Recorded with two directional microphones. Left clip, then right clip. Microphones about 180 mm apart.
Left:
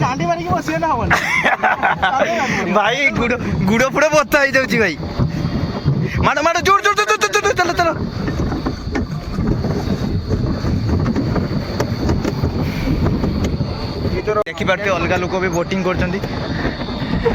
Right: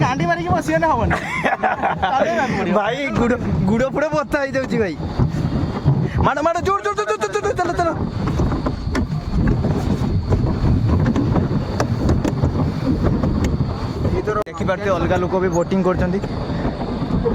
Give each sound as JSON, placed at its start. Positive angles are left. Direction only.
{"t": 0.0, "sound": "a man's voice", "side_deg": -20}
{"t": 6.2, "sound": "speech", "side_deg": -15}
{"t": 14.8, "sound": "speech", "side_deg": -25}